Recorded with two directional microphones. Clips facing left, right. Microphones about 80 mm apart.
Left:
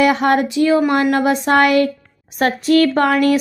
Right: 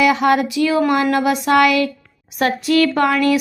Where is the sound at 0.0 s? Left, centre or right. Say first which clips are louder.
Even; left.